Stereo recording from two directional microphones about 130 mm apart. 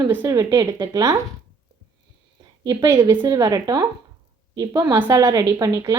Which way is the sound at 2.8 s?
20° right (ahead or behind).